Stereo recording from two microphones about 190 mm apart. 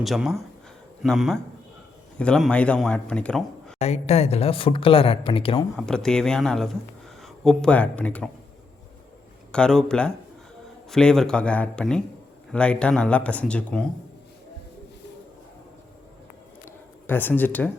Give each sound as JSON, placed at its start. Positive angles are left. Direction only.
{"t": 0.0, "sound": "a man's voice", "side_deg": 0}
{"t": 3.8, "sound": "speech", "side_deg": 35}
{"t": 5.7, "sound": "a man's voice", "side_deg": 5}
{"t": 9.5, "sound": "a man's voice", "side_deg": 5}
{"t": 17.1, "sound": "speech", "side_deg": 10}